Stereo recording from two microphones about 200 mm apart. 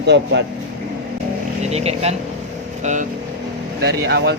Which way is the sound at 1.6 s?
30° right (ahead or behind).